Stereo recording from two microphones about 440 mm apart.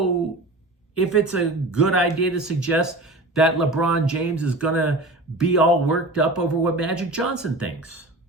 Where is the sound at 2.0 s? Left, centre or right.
Left.